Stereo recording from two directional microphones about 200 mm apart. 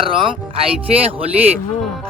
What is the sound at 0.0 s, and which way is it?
Speech, 25° right (ahead or behind).